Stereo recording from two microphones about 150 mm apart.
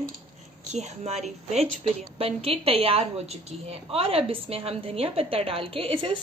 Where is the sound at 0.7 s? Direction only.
50° right (ahead or behind).